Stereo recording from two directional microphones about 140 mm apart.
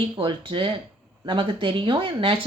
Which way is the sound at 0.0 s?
35° right (ahead or behind).